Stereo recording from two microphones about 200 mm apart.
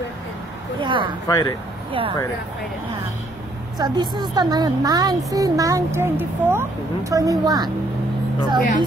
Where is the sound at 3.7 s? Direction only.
20° right (ahead or behind).